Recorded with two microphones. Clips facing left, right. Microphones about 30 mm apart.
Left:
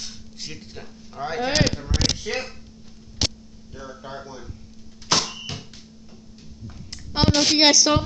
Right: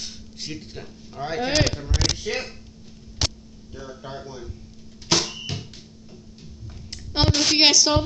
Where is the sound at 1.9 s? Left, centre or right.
Left.